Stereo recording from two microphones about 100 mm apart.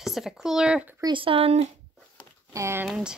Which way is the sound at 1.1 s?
65° right (ahead or behind).